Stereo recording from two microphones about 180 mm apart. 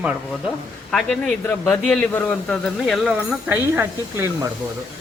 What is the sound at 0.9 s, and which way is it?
A man's voice, centre (ahead or behind).